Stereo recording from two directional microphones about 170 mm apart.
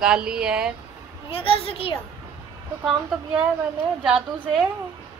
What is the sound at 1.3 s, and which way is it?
Speech, 35° left (ahead or behind).